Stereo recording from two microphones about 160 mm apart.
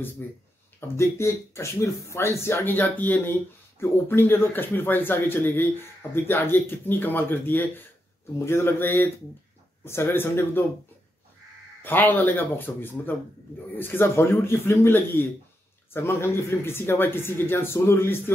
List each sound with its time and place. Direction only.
0.2 s speech: 10° left (ahead or behind)
11.8 s speech: 10° left (ahead or behind)